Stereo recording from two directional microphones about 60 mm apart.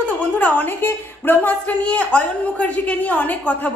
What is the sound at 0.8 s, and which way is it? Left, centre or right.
A woman's voice, left.